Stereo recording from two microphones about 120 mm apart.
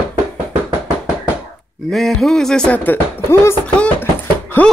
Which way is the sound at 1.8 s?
5° left (ahead or behind).